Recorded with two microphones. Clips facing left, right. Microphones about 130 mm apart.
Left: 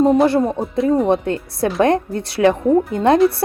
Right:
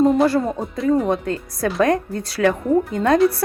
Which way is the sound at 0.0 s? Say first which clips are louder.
Left 2 dB; centre (ahead or behind).